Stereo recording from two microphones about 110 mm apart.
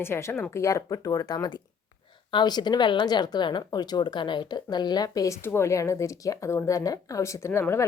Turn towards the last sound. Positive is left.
turn(degrees=20)  # may be behind; listen again after turning